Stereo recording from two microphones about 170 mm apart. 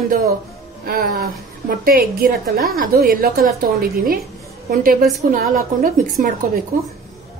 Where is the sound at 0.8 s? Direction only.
60° right (ahead or behind).